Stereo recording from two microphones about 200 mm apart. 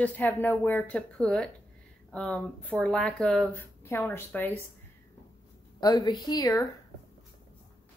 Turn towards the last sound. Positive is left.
turn(degrees=20)  # may be behind; listen again after turning